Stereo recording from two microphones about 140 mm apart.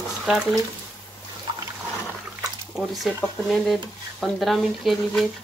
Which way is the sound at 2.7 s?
Centre (ahead or behind).